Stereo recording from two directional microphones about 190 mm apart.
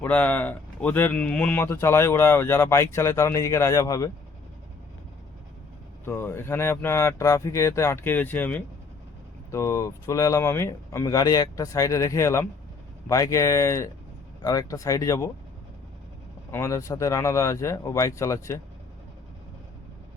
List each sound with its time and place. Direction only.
0.0 s a man's voice: 10° left (ahead or behind)
6.1 s a man's voice: 10° left (ahead or behind)
16.5 s a man's voice: 15° left (ahead or behind)